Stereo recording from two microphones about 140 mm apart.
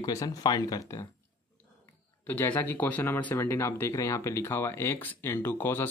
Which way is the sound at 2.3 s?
15° left (ahead or behind).